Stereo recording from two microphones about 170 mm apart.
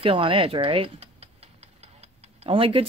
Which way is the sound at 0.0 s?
30° right (ahead or behind).